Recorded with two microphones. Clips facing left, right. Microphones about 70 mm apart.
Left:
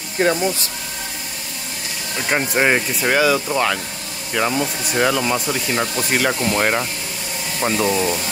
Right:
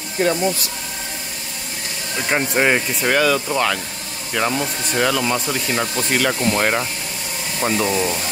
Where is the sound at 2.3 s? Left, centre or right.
Centre.